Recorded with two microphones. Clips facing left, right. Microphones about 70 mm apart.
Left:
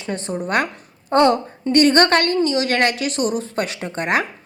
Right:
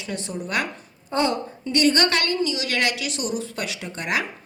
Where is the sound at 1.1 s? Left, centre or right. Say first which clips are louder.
Left 8 dB; left.